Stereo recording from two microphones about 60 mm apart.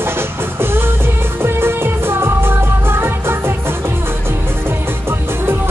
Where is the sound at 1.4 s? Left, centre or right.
Right.